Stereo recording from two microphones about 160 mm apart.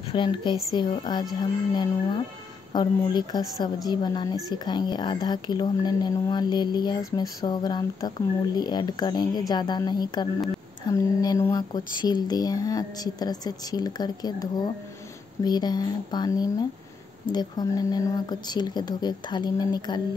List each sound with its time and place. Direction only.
0.0 s a woman's voice: 30° left (ahead or behind)